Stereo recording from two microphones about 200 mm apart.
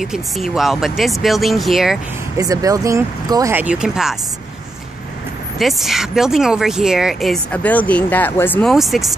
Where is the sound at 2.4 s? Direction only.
15° right (ahead or behind).